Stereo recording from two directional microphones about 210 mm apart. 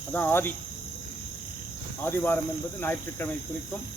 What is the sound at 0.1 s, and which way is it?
Speech, 10° left (ahead or behind).